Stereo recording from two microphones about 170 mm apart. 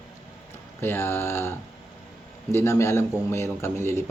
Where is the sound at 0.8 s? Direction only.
15° left (ahead or behind).